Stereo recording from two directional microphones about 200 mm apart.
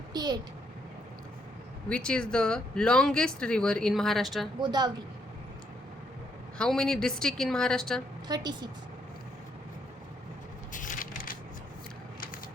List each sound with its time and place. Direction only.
0.1 s a sound: 20° right (ahead or behind)
1.9 s speech: 5° left (ahead or behind)
4.6 s a woman's voice: 20° right (ahead or behind)
6.6 s speech: 5° left (ahead or behind)
8.3 s a woman's voice: 20° right (ahead or behind)
10.7 s crushing: 40° left (ahead or behind)